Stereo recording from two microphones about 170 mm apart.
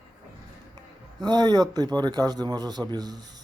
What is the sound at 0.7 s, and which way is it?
Speech, 25° right (ahead or behind).